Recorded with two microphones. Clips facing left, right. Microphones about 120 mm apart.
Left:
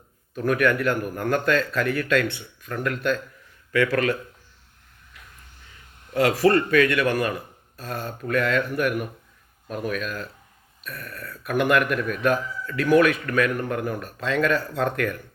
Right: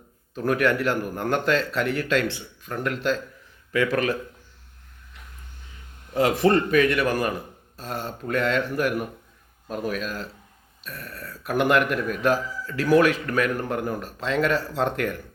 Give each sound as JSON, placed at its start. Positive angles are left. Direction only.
{"t": 0.3, "sound": "speech", "side_deg": -30}
{"t": 6.2, "sound": "speech", "side_deg": -25}